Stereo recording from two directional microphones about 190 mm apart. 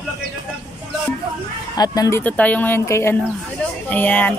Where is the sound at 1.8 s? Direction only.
15° left (ahead or behind).